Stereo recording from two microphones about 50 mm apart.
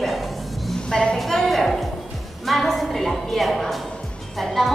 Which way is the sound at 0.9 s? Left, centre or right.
Centre.